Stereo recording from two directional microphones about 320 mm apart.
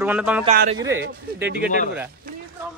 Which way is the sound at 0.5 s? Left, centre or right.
Right.